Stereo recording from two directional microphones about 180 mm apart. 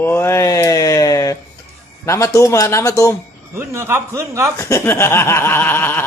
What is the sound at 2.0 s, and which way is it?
A man's voice, 15° left (ahead or behind).